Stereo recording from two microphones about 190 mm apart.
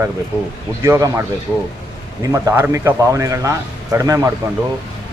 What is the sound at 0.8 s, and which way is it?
Speech, 15° right (ahead or behind).